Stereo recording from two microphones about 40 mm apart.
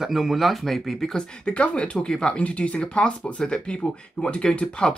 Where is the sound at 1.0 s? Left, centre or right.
Left.